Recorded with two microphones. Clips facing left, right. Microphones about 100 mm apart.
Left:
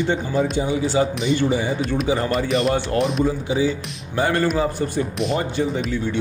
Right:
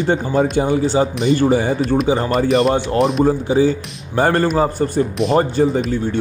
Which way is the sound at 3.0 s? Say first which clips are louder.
Right 7 dB; centre (ahead or behind).